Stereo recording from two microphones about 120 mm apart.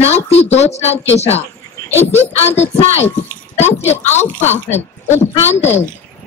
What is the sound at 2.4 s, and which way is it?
Speech, 65° left (ahead or behind).